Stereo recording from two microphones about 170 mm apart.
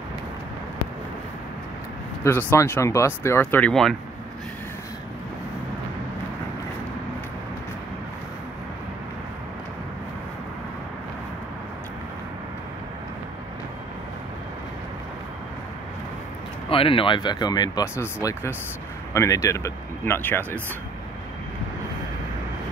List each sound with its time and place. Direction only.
2.2 s speech: 15° left (ahead or behind)
16.6 s speech: 30° left (ahead or behind); by 20.4 s 10° left (ahead or behind)